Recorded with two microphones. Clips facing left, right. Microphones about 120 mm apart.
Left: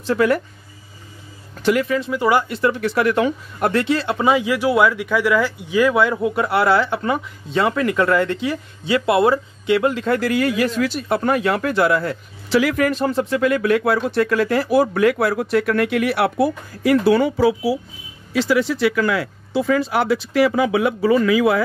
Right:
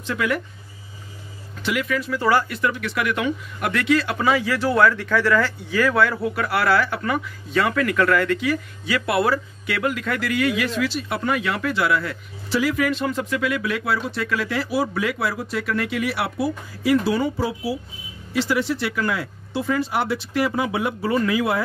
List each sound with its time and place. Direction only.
0.0 s speech: 35° left (ahead or behind)
1.6 s speech: 40° left (ahead or behind)
2.0 s speech: 20° left (ahead or behind); by 12.2 s 40° left (ahead or behind)
12.4 s speech: 80° left
12.7 s speech: 45° left (ahead or behind)
13.5 s speech: 50° left (ahead or behind); by 17.7 s 90° left
19.1 s speech: 90° left